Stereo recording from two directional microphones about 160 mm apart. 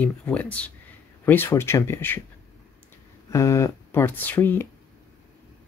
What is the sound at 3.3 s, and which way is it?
Speech, 20° left (ahead or behind).